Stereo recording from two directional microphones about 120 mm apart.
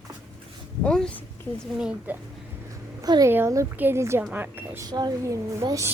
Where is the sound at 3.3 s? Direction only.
20° right (ahead or behind).